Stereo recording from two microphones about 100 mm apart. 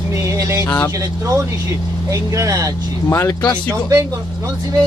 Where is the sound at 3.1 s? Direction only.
25° left (ahead or behind).